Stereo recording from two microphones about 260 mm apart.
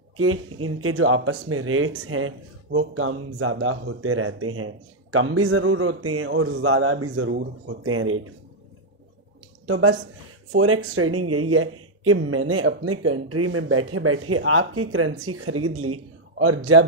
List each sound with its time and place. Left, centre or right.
0.2 s a man's voice: right
9.7 s speech: right